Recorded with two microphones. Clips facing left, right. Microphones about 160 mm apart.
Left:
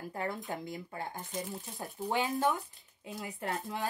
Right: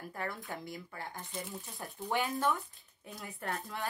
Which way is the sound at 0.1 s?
20° left (ahead or behind).